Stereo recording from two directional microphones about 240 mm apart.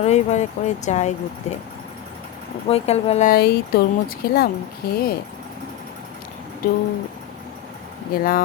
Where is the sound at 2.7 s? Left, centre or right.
Left.